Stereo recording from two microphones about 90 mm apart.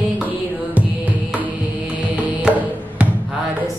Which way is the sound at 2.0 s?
15° right (ahead or behind).